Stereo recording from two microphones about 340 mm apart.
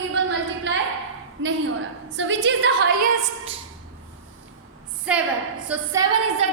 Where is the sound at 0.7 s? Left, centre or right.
Right.